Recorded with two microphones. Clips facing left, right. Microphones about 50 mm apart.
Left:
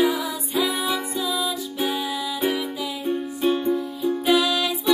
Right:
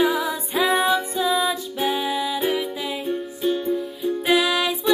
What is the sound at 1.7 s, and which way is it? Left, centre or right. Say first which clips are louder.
Music: right 1 dB; centre.